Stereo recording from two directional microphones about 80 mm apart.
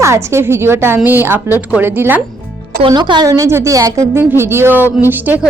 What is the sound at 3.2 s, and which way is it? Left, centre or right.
Speech, right.